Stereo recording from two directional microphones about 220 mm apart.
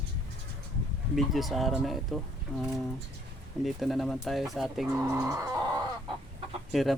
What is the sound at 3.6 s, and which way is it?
Chicken, centre (ahead or behind).